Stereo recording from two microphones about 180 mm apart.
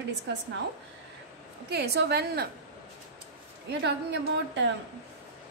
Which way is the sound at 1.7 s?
65° right (ahead or behind).